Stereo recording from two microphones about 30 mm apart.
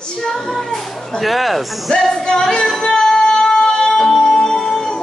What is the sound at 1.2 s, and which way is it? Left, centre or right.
Speech, centre.